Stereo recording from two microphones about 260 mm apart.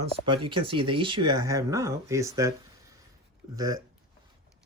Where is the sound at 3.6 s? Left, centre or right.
Centre.